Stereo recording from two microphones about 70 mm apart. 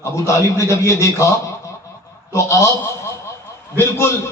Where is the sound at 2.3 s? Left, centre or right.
Left.